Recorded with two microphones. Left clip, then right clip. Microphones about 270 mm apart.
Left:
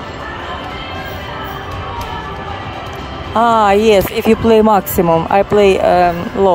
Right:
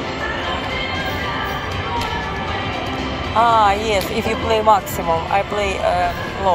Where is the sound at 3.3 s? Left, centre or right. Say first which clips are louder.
Left 4 dB; left.